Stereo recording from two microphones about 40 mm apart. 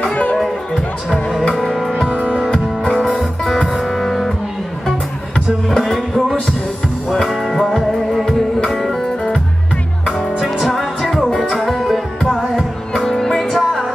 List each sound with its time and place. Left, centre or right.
0.0 s music: left
2.1 s music: right
4.0 s music: centre
5.7 s music: centre
10.7 s music: centre
13.1 s music: centre
13.4 s music: centre